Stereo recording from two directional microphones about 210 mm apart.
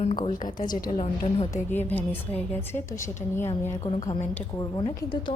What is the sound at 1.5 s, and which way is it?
A woman's voice, 10° left (ahead or behind).